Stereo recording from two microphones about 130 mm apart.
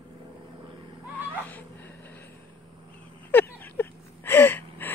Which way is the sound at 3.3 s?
15° left (ahead or behind).